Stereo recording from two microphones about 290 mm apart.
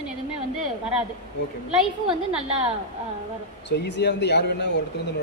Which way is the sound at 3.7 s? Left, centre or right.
Left.